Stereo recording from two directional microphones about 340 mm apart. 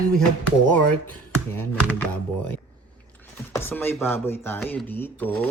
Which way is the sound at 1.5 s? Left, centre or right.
Centre.